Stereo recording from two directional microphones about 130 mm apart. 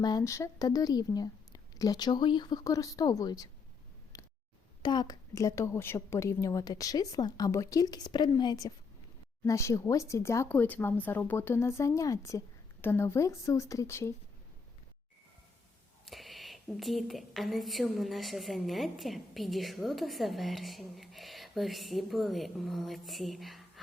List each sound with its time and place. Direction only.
0.0 s a woman's voice: 30° left (ahead or behind)
4.1 s a sound: 25° left (ahead or behind)
4.8 s a woman's voice: 35° left (ahead or behind)
16.0 s speech: centre (ahead or behind)